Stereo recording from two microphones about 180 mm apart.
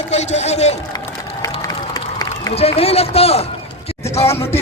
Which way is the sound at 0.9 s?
30° left (ahead or behind).